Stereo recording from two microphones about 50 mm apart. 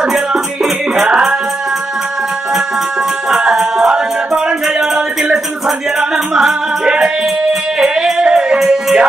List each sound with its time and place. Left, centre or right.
0.0 s music: centre
1.0 s a sound: centre
3.3 s music: centre
5.9 s music: centre